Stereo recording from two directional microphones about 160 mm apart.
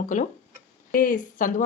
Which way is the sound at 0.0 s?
50° left (ahead or behind).